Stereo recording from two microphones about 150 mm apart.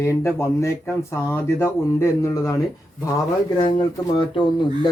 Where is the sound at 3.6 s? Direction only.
30° left (ahead or behind).